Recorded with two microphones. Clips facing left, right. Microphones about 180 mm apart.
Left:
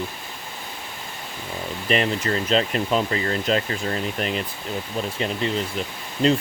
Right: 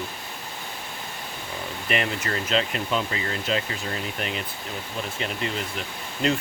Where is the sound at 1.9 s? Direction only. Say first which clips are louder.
Left 5 dB; 30° left (ahead or behind).